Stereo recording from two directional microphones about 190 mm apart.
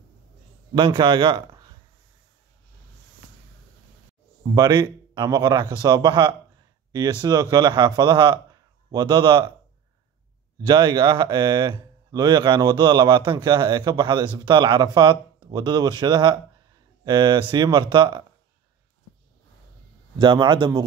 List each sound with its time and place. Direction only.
0.7 s a man's voice: 25° right (ahead or behind)
4.6 s a man's voice: 25° right (ahead or behind)
10.6 s a man's voice: 20° right (ahead or behind)
20.2 s a man's voice: 25° right (ahead or behind)